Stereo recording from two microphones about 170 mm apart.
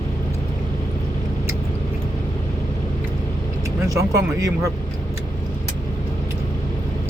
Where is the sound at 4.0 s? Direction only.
20° right (ahead or behind).